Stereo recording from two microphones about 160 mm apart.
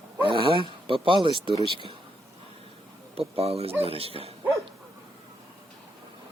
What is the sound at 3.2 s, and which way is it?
Speech, 40° right (ahead or behind).